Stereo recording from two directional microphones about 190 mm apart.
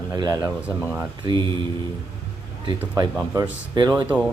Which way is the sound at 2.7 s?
20° right (ahead or behind).